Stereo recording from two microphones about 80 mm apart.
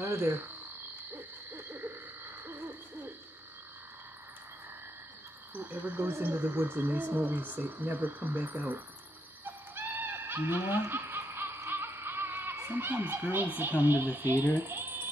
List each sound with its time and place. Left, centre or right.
0.0 s frog: right
1.1 s hoot: right
5.5 s speech: right
9.4 s owl: right
12.6 s speech: right